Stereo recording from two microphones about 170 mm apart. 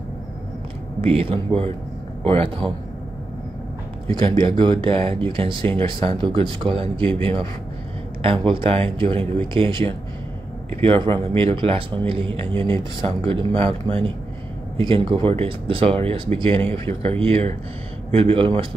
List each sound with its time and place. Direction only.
1.0 s speech: 35° right (ahead or behind)
4.1 s speech: 25° right (ahead or behind)